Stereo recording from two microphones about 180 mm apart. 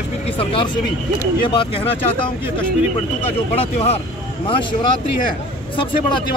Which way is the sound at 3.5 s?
35° left (ahead or behind).